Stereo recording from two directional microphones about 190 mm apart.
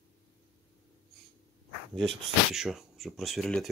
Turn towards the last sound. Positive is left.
turn(degrees=0)  # may be behind; listen again after turning